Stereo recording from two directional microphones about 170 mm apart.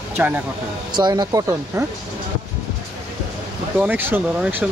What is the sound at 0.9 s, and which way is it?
Speech, 25° right (ahead or behind).